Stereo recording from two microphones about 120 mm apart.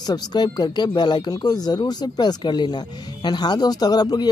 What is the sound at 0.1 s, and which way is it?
Speech, 35° left (ahead or behind).